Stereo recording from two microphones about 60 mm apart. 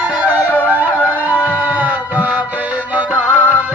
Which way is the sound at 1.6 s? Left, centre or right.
Right.